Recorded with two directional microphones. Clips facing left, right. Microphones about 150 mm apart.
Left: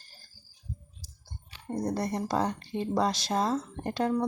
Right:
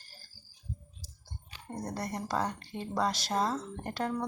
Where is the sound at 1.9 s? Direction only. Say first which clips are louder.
Left 3 dB; 25° left (ahead or behind).